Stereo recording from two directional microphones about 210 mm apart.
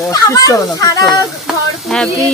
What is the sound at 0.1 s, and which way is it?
Speech, 15° left (ahead or behind).